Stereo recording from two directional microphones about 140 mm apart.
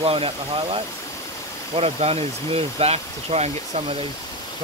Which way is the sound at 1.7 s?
45° right (ahead or behind).